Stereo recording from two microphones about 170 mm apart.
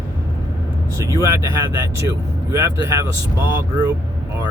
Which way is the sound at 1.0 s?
15° right (ahead or behind).